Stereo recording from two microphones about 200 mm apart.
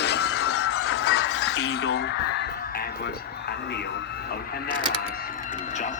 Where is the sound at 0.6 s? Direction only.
90° left; by 1.9 s 55° left (ahead or behind).